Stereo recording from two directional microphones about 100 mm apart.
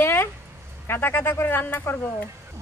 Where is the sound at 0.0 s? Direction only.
20° left (ahead or behind).